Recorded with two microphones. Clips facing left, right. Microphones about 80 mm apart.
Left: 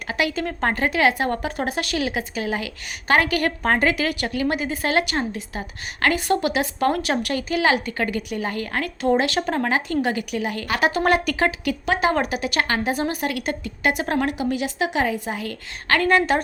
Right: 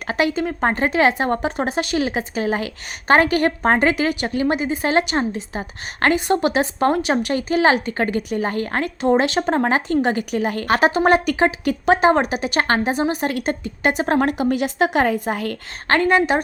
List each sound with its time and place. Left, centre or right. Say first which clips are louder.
0.1 s speech: right 4 dB; right
0.3 s speech: right 3 dB; centre; by 10.9 s right
10.9 s speech: right 4 dB; right
11.6 s speech: right 6 dB; right
12.9 s speech: right 3 dB; right
16.0 s a woman's voice: right 1 dB; centre